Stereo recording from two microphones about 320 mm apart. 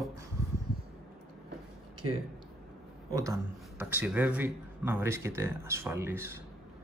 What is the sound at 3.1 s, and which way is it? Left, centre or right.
Speech, centre.